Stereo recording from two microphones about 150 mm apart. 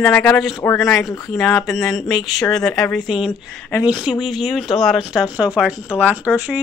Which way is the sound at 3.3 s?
10° left (ahead or behind).